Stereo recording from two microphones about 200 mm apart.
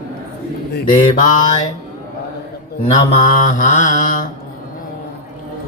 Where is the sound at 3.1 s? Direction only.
40° left (ahead or behind).